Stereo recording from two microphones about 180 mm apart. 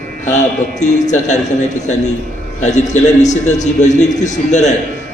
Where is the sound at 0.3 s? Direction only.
40° left (ahead or behind).